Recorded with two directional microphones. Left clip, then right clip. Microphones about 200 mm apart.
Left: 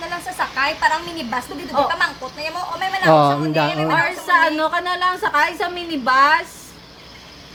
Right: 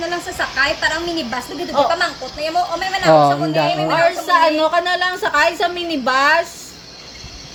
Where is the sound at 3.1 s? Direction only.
10° left (ahead or behind).